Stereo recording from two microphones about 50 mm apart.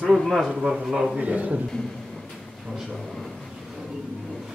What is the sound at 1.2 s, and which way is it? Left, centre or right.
Speech, right.